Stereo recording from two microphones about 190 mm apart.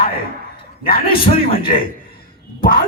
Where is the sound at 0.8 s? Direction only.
50° left (ahead or behind).